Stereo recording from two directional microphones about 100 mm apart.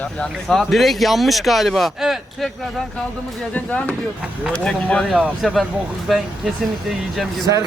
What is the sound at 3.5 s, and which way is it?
Speech, 15° left (ahead or behind).